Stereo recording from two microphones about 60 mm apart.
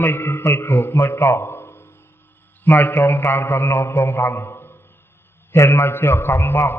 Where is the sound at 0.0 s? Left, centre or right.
Left.